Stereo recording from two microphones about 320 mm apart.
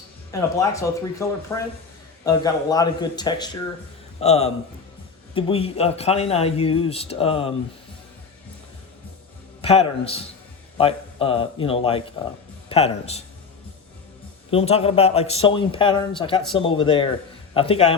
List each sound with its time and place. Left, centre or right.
0.3 s a man's voice: centre
9.6 s a man's voice: centre
14.5 s a man's voice: centre